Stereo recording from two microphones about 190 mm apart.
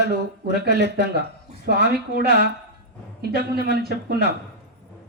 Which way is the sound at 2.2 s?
60° right (ahead or behind).